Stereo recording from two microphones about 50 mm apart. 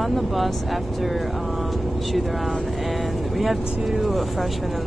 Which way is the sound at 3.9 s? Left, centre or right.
Centre.